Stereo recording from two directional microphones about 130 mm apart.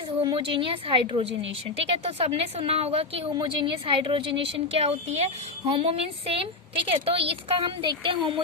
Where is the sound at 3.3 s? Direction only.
40° right (ahead or behind).